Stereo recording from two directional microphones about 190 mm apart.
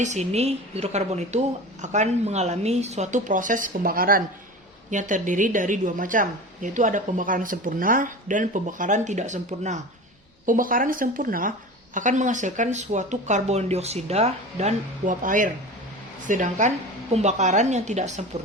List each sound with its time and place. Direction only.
0.0 s a woman's voice: 35° right (ahead or behind)